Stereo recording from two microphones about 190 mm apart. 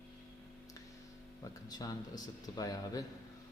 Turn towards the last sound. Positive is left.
turn(degrees=20)  # may be behind; listen again after turning